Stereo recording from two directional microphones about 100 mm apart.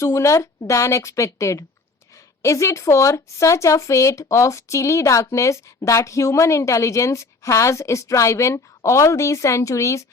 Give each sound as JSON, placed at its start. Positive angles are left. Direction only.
{"t": 0.0, "sound": "speech", "side_deg": 30}